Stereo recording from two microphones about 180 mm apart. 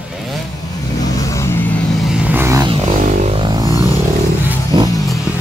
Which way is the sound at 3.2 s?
30° right (ahead or behind).